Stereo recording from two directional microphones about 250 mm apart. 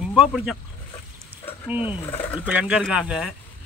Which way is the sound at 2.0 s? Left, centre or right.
Centre.